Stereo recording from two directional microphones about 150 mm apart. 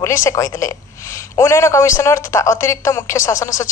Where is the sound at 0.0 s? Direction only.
20° left (ahead or behind).